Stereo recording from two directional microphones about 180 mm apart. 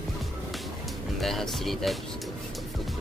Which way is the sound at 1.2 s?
Centre (ahead or behind).